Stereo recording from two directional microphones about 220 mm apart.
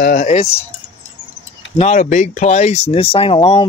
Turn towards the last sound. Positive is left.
turn(degrees=25)  # may be behind; listen again after turning